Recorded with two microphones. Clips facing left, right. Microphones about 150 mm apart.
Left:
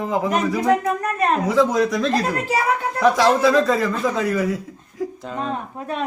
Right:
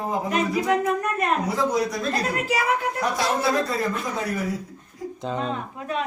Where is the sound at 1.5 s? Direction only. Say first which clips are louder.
Left 6 dB; 90° left.